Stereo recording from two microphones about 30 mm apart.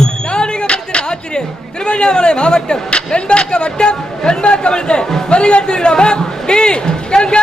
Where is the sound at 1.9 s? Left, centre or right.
Left.